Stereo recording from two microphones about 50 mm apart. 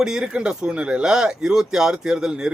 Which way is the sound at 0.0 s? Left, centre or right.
Centre.